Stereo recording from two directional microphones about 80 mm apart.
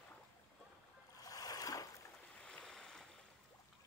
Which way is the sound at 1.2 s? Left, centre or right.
Left.